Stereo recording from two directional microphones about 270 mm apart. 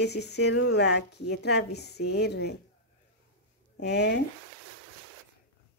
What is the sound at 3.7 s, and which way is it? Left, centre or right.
Speech, left.